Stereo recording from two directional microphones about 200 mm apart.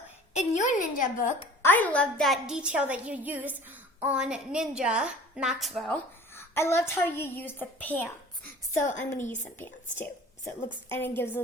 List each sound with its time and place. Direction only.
0.3 s a woman's voice: 40° left (ahead or behind)
1.6 s a woman's voice: 10° left (ahead or behind)
6.3 s a woman's voice: 10° left (ahead or behind)